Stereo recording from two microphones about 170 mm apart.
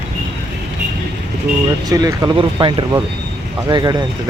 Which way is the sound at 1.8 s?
20° right (ahead or behind).